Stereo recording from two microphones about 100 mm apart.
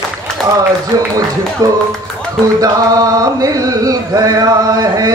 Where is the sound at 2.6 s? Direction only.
35° right (ahead or behind).